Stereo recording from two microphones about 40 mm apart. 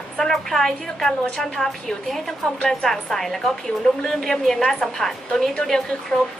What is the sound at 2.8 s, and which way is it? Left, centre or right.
A woman's voice, centre.